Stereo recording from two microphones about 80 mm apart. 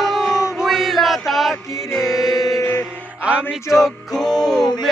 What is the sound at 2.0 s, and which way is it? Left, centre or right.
Mantra, centre.